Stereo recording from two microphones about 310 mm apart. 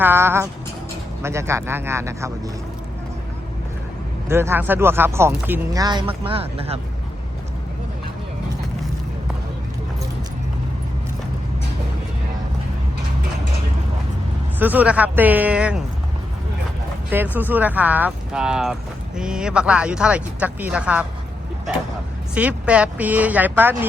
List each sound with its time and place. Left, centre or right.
0.0 s speech: centre
4.3 s speech: centre
14.6 s speech: centre
17.3 s speech: centre
22.4 s speech: centre